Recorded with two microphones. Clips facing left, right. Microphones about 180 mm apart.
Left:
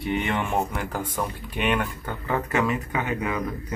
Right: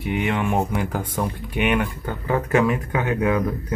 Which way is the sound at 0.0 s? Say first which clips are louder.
Right 3 dB; 10° right (ahead or behind).